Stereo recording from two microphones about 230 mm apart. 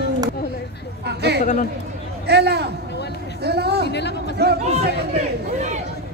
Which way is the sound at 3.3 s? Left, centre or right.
Right.